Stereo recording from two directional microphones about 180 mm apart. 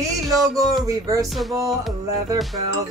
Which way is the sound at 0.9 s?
20° right (ahead or behind).